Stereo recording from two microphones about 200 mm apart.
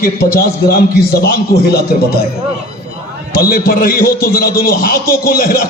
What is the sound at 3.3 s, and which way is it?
A man's voice, 45° left (ahead or behind).